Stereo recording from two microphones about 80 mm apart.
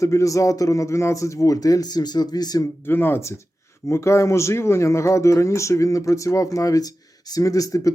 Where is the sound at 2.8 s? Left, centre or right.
Left.